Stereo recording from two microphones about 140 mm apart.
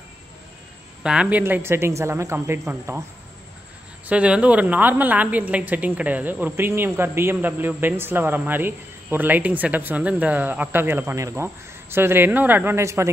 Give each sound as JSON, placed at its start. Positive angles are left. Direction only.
{"t": 1.0, "sound": "a woman's voice", "side_deg": -5}
{"t": 1.4, "sound": "a woman's voice", "side_deg": -15}
{"t": 4.1, "sound": "a woman's voice", "side_deg": -10}